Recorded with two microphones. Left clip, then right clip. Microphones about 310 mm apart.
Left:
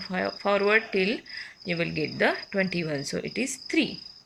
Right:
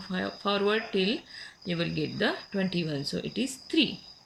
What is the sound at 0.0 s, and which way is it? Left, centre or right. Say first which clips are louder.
Speech: left 4 dB; centre.